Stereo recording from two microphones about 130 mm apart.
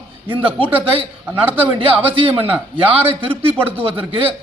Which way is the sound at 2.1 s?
45° right (ahead or behind).